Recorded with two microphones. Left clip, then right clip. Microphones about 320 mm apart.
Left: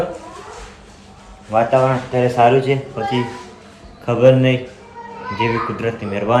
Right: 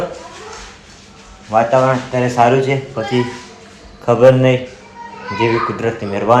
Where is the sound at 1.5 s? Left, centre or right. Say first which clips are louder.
Right 2 dB; centre.